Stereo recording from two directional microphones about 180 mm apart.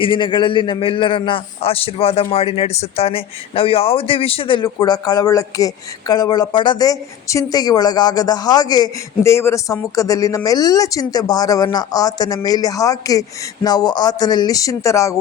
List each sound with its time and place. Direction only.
0.0 s a man's voice: 25° left (ahead or behind)